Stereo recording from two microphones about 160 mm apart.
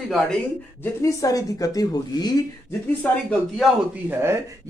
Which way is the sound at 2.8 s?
10° left (ahead or behind).